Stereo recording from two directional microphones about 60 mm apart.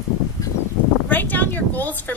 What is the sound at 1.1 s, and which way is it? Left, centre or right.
Female singing, left.